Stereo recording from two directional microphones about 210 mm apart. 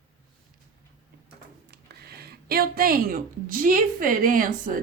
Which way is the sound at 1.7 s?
50° right (ahead or behind).